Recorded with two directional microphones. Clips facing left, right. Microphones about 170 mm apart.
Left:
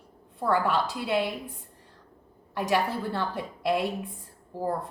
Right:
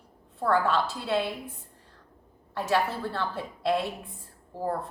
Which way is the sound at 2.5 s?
15° left (ahead or behind).